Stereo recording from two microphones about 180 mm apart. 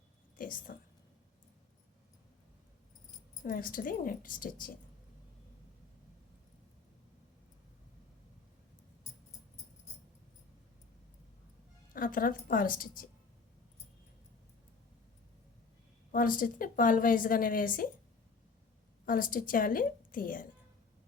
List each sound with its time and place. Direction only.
0.3 s speech: 50° left (ahead or behind)
3.4 s a woman's voice: 50° left (ahead or behind)
11.9 s a woman's voice: 50° left (ahead or behind)
16.1 s a woman's voice: 50° left (ahead or behind)
19.0 s a woman's voice: 50° left (ahead or behind)